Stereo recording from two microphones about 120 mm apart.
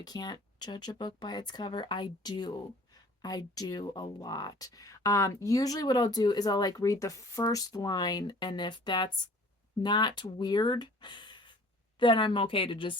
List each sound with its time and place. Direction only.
0.0 s a woman's voice: 35° left (ahead or behind)